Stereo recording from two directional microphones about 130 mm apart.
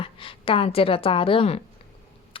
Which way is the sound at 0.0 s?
45° left (ahead or behind).